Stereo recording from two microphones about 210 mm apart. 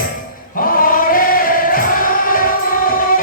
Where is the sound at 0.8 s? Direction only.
40° left (ahead or behind).